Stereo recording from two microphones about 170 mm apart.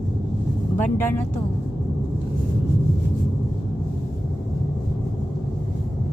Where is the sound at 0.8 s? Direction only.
10° left (ahead or behind).